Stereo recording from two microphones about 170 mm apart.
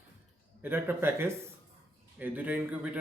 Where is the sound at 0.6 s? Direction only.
10° right (ahead or behind).